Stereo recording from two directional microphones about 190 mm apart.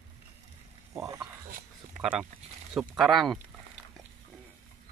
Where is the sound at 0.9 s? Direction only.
15° right (ahead or behind).